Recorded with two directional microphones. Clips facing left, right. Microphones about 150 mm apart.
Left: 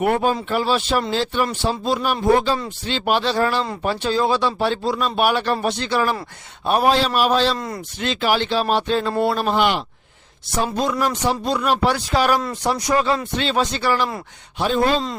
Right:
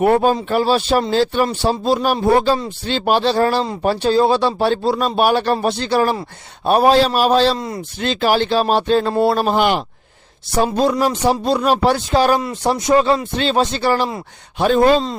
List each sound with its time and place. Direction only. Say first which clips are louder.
0.0 s speech: right 5 dB; 35° right (ahead or behind)
14.6 s speech: right 6 dB; 55° right (ahead or behind)